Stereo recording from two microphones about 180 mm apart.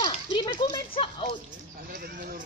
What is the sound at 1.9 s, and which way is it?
Speech, 45° right (ahead or behind).